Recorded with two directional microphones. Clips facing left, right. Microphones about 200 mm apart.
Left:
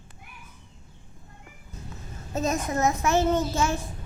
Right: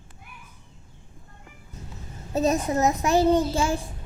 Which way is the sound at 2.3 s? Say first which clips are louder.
Right 4 dB; 35° right (ahead or behind).